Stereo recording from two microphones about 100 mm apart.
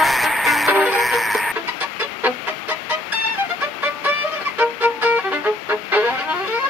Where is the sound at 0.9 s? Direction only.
Centre (ahead or behind).